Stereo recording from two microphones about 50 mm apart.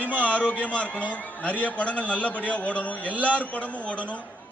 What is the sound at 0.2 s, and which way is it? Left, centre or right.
A man's voice, left.